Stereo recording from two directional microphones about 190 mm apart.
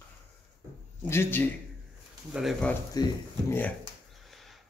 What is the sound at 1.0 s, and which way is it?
Speech, 10° left (ahead or behind).